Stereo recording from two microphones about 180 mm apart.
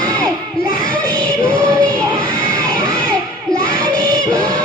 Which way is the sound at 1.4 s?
5° left (ahead or behind).